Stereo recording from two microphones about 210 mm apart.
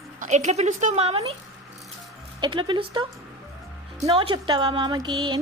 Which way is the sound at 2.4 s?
25° right (ahead or behind).